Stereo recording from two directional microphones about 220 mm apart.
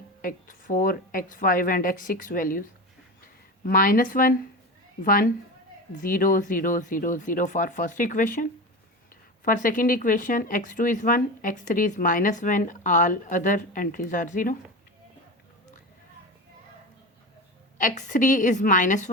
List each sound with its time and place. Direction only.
0.2 s speech: 40° left (ahead or behind)
17.7 s speech: 35° left (ahead or behind)